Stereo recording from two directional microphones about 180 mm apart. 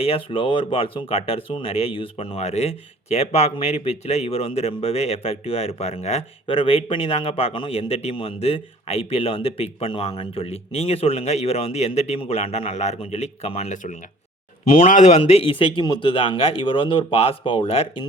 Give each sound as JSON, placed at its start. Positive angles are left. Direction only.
{"t": 0.0, "sound": "a man's voice", "side_deg": 30}